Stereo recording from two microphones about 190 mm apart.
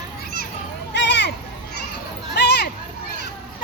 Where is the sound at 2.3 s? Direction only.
60° left (ahead or behind).